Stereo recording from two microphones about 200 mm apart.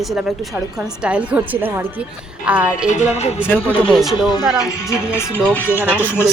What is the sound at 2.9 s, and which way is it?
Speech, 35° left (ahead or behind).